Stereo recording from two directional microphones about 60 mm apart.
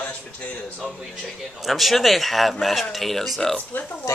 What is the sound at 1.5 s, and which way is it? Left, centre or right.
Speech, centre.